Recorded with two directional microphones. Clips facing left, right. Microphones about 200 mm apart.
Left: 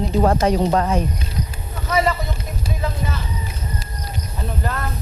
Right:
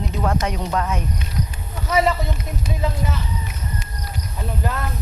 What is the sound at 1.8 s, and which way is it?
Speech, 20° right (ahead or behind).